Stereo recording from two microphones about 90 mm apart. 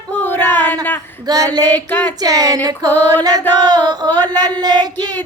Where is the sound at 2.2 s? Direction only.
45° right (ahead or behind).